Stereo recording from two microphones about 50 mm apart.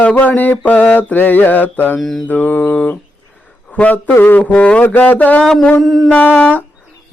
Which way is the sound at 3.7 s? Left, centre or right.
Left.